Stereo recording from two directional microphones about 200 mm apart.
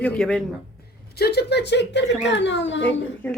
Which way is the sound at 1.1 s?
55° left (ahead or behind).